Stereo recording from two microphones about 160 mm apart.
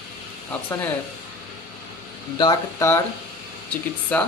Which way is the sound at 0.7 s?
15° left (ahead or behind).